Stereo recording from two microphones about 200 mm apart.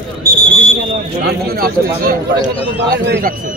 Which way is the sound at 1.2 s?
55° right (ahead or behind).